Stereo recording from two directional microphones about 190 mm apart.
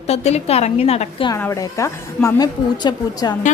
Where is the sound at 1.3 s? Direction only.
15° left (ahead or behind).